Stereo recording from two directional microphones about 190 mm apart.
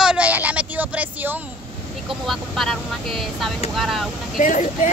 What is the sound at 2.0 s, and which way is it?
Speech, centre (ahead or behind).